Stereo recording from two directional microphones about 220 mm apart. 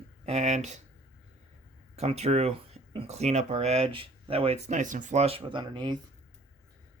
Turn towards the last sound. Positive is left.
turn(degrees=-20)  # may be behind; listen again after turning